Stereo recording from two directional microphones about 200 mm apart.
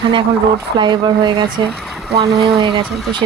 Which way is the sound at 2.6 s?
25° right (ahead or behind).